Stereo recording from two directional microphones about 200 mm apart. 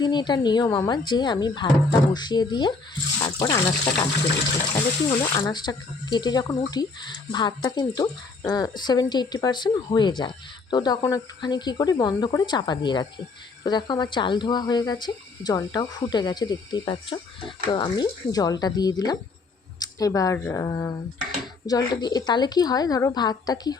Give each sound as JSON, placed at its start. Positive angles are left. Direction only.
{"t": 0.0, "sound": "speech", "side_deg": 20}